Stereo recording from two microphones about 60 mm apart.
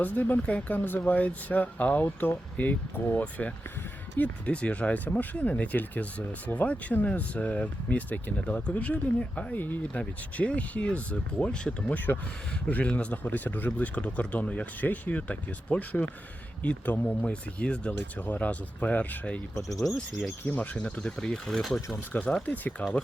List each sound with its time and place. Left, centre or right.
0.0 s speech: left
20.4 s speech: left
21.2 s speech: centre
22.1 s speech: left